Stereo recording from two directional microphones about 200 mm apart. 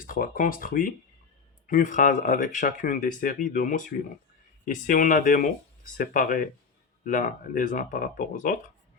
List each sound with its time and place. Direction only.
0.0 s speech: 45° left (ahead or behind)